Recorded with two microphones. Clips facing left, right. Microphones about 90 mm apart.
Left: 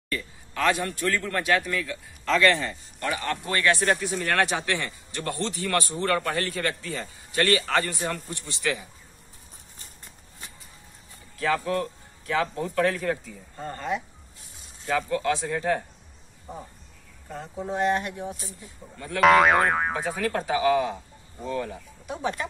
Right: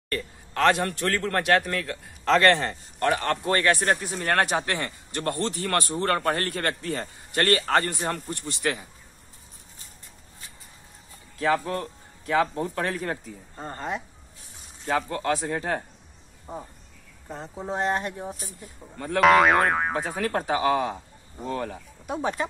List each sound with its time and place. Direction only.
0.1 s a man's voice: 60° right (ahead or behind)
6.1 s a man's voice: 45° right (ahead or behind)
11.3 s speech: 30° right (ahead or behind)
15.4 s speech: 30° right (ahead or behind)
17.3 s speech: 30° right (ahead or behind)
19.1 s boing: centre (ahead or behind)
20.2 s speech: 40° right (ahead or behind)